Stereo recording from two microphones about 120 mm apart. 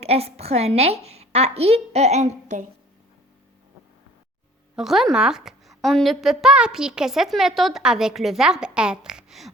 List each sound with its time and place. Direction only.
0.0 s a woman's voice: 60° right (ahead or behind); by 2.6 s 75° right (ahead or behind)
4.8 s a woman's voice: centre (ahead or behind)